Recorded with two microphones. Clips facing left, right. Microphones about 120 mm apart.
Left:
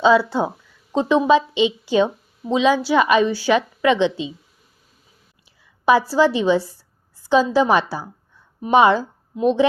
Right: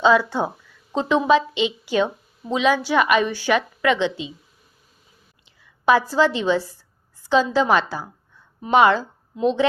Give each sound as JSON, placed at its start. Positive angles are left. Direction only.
{"t": 0.0, "sound": "a woman's voice", "side_deg": 20}
{"t": 5.8, "sound": "a woman's voice", "side_deg": 10}